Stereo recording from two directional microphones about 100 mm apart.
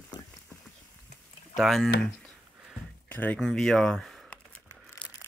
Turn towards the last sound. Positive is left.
turn(degrees=5)  # may be behind; listen again after turning